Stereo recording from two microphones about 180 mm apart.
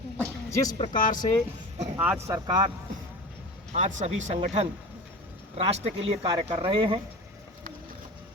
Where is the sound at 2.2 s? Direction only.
20° right (ahead or behind).